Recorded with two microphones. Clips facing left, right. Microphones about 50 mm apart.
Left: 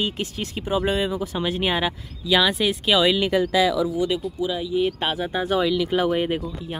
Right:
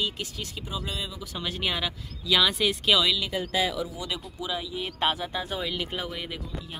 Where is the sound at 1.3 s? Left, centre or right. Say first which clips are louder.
Left 2 dB; left.